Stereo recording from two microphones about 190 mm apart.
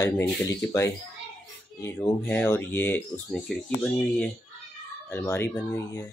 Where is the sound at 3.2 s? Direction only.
Centre (ahead or behind).